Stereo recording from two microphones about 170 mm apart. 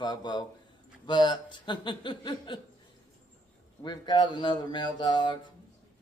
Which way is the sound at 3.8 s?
25° left (ahead or behind).